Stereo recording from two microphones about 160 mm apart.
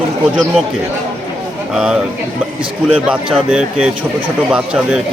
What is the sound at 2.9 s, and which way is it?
Speech, 5° right (ahead or behind).